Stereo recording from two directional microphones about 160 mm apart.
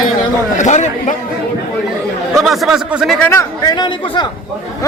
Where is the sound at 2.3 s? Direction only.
Centre (ahead or behind).